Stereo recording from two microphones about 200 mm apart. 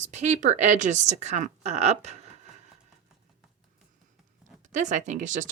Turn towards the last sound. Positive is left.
turn(degrees=-40)  # may be behind; listen again after turning